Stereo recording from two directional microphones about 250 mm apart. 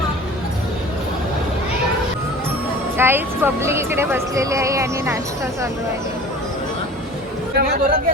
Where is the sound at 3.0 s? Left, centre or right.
Centre.